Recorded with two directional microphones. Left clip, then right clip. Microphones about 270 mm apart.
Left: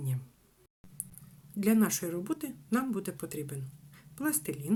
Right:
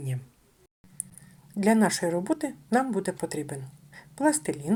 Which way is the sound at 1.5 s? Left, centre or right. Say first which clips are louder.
Right 6 dB; centre.